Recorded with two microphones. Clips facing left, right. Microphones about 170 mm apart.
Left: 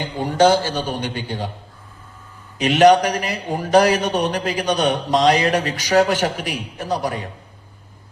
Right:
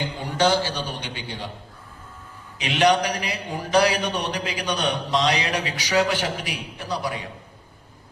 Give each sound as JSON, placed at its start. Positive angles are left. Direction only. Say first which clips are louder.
{"t": 0.0, "sound": "a man's voice", "louder": "left 6 dB", "side_deg": 45}
{"t": 2.6, "sound": "a man's voice", "louder": "left 7 dB", "side_deg": 45}